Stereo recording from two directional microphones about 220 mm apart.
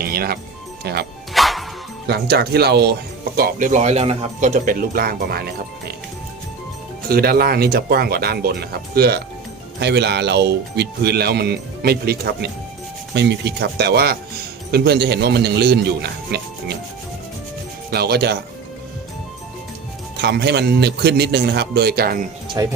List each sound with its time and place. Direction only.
0.0 s music: 45° right (ahead or behind)
0.9 s speech: 45° right (ahead or behind)
1.3 s music: centre (ahead or behind)
2.0 s speech: 45° right (ahead or behind)
7.1 s speech: 45° right (ahead or behind)
17.9 s speech: 45° right (ahead or behind)
20.2 s speech: 50° right (ahead or behind)
22.6 s speech: 15° right (ahead or behind)